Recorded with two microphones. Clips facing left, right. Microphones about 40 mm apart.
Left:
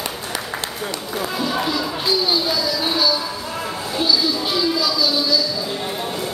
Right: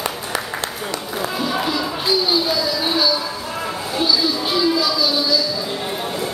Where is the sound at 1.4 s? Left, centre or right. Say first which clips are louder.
Even; centre.